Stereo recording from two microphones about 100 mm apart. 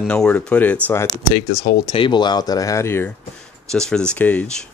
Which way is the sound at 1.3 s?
55° left (ahead or behind).